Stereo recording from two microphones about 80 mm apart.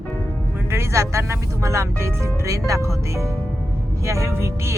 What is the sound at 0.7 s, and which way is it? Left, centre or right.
Speech, right.